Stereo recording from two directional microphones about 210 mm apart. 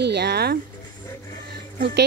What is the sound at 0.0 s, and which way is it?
Speech, 55° right (ahead or behind).